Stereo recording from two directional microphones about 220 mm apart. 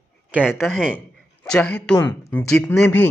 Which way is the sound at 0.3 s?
5° right (ahead or behind).